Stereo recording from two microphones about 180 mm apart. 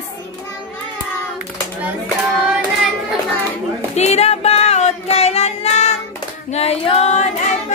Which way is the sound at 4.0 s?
40° left (ahead or behind).